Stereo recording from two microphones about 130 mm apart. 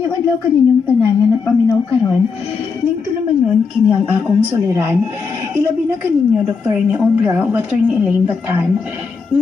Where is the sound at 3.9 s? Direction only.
10° right (ahead or behind).